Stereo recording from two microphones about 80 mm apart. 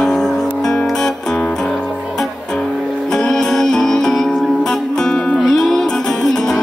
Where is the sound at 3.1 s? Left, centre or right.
Centre.